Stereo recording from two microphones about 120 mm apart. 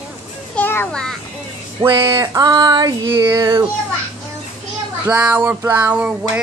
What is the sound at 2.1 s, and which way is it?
Female singing, 30° right (ahead or behind).